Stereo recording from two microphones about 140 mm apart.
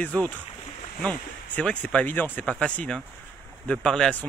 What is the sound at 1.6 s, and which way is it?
Speech, 10° left (ahead or behind).